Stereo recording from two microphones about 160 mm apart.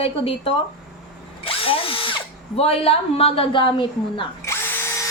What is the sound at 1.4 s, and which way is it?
Drill, 35° left (ahead or behind).